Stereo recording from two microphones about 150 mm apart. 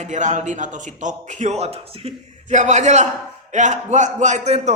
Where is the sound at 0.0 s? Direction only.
55° right (ahead or behind).